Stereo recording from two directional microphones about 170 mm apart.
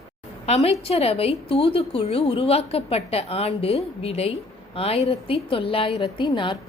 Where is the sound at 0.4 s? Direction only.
40° left (ahead or behind).